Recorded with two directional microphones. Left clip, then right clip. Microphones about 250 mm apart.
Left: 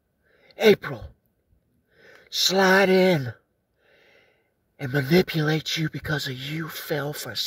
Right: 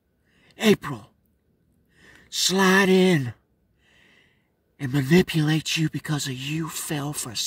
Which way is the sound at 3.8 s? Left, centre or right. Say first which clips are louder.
Even; centre.